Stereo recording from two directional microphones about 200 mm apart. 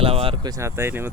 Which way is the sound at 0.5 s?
15° right (ahead or behind).